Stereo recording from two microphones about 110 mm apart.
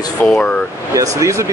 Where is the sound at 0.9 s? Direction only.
30° right (ahead or behind).